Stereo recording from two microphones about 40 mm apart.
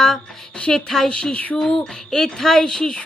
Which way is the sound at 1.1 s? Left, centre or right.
Left.